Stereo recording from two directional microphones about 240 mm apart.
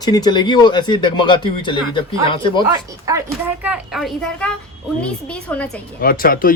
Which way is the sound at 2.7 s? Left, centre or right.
Centre.